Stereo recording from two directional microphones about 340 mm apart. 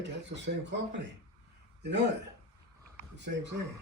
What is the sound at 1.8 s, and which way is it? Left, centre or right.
Speech, right.